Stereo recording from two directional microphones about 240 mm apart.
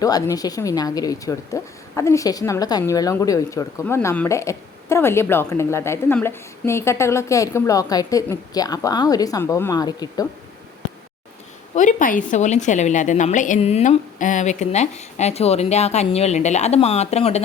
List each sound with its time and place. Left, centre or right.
0.0 s speech: centre
11.7 s a woman's voice: left